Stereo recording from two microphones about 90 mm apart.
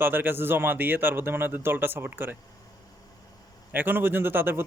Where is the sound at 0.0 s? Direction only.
20° right (ahead or behind).